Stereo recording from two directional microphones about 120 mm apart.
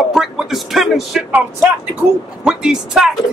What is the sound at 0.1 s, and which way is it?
Speech, centre (ahead or behind).